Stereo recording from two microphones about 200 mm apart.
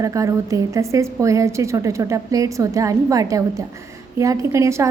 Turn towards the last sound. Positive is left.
turn(degrees=-15)  # may be behind; listen again after turning